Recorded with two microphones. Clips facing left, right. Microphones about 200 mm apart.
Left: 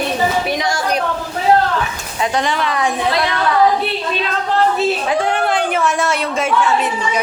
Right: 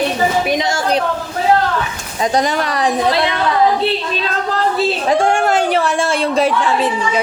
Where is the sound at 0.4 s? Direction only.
20° right (ahead or behind).